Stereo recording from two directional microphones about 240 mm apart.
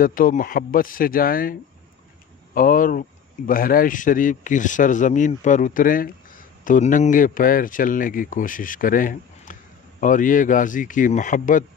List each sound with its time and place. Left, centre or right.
0.0 s speech: left